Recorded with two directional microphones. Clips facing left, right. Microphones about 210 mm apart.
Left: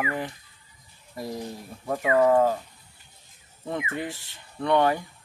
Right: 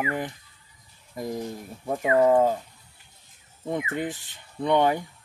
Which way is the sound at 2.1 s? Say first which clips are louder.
Right 1 dB; 15° right (ahead or behind).